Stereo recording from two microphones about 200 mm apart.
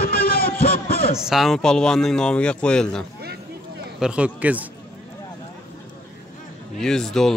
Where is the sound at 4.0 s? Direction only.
5° right (ahead or behind).